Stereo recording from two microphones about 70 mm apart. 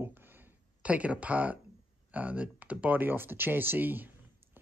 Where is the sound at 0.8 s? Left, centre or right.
Centre.